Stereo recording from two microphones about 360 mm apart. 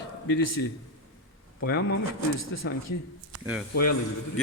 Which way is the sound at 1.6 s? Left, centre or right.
Left.